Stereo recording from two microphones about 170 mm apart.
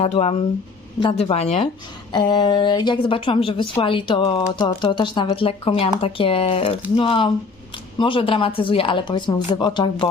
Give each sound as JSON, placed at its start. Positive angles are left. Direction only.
{"t": 0.0, "sound": "speech", "side_deg": 35}
{"t": 2.1, "sound": "a woman's voice", "side_deg": 25}